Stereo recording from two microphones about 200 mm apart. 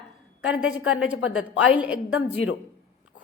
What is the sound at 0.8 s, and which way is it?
Speech, 75° left (ahead or behind).